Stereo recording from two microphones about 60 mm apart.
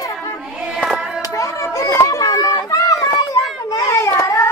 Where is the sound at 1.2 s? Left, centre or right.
Left.